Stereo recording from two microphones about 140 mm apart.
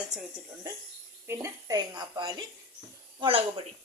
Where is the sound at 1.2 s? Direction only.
20° right (ahead or behind).